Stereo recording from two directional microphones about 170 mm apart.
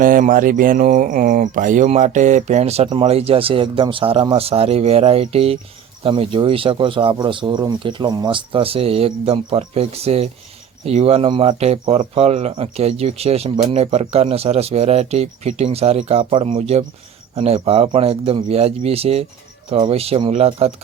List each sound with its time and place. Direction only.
0.0 s speech: 55° right (ahead or behind); by 20.7 s 35° right (ahead or behind)